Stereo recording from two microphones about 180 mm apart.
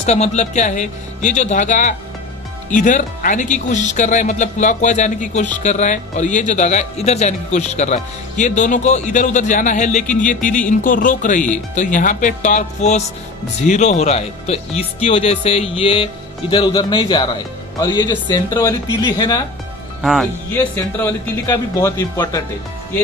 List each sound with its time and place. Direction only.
0.0 s speech: 40° left (ahead or behind); by 19.4 s 20° left (ahead or behind)
20.0 s speech: centre (ahead or behind)
20.5 s speech: 10° left (ahead or behind)